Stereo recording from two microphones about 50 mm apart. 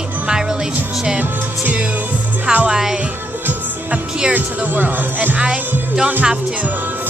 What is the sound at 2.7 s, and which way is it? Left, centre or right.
Music, centre.